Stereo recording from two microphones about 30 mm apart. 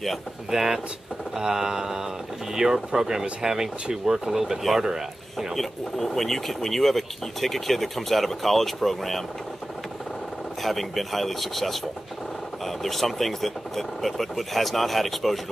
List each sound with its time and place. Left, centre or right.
0.5 s speech: centre
5.6 s speech: centre
10.6 s speech: centre
12.8 s speech: centre